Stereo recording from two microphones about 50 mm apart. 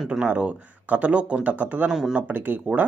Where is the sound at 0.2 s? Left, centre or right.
Right.